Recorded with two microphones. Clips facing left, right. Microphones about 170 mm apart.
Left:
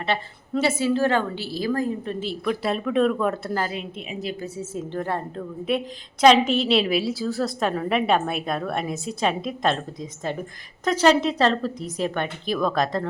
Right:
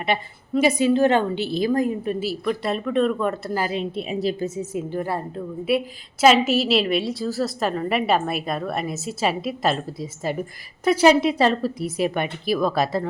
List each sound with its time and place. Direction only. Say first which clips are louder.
0.0 s a woman's voice: right 2 dB; 15° right (ahead or behind)
3.7 s a woman's voice: right 6 dB; 30° right (ahead or behind)
4.4 s a woman's voice: right 4 dB; 15° right (ahead or behind)